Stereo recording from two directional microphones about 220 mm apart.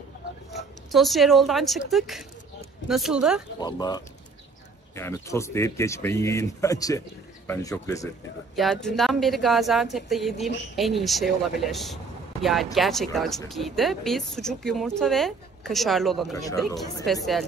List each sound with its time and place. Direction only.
0.5 s speech: centre (ahead or behind)
3.5 s speech: 20° left (ahead or behind)
8.5 s speech: centre (ahead or behind)
16.3 s speech: 15° left (ahead or behind)
17.0 s speech: centre (ahead or behind)